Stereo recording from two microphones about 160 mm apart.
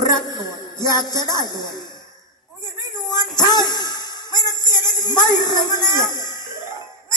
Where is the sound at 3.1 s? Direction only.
25° left (ahead or behind).